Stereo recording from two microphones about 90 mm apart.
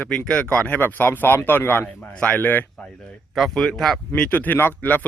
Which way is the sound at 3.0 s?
Centre (ahead or behind).